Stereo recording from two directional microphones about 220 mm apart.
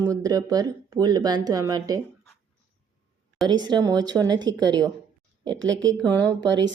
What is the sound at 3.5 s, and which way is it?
Speech, 20° right (ahead or behind).